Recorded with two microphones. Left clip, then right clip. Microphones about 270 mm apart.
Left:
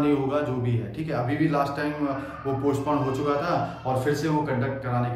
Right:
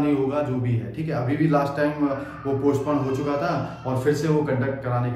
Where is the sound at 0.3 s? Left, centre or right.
Centre.